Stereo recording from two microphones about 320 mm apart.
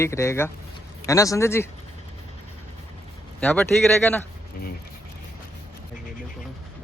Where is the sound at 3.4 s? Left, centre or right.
Centre.